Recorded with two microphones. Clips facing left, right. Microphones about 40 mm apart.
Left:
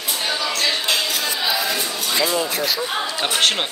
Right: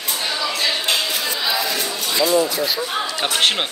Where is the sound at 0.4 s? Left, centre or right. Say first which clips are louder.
Right 1 dB; centre.